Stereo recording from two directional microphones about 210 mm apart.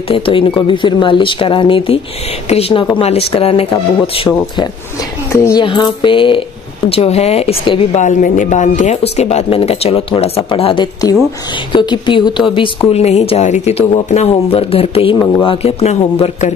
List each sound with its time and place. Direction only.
0.1 s speech: 25° left (ahead or behind)
5.3 s speech: 15° left (ahead or behind)
8.0 s speech: 35° left (ahead or behind)